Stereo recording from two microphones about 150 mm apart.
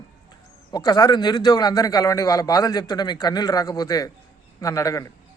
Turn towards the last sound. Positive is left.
turn(degrees=20)  # may be behind; listen again after turning